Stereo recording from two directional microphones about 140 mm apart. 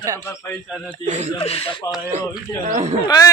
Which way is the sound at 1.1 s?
55° right (ahead or behind).